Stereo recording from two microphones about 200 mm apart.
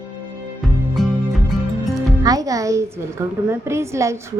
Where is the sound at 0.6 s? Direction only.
Centre (ahead or behind).